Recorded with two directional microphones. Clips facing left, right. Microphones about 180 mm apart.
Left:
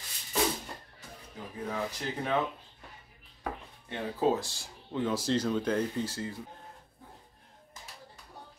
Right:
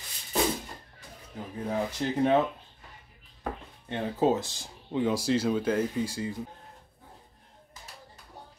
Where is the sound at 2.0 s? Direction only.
30° right (ahead or behind).